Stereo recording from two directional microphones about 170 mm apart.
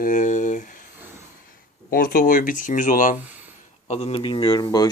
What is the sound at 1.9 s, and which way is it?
Speech, 60° left (ahead or behind).